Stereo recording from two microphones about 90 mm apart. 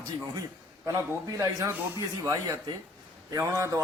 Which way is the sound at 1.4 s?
35° right (ahead or behind).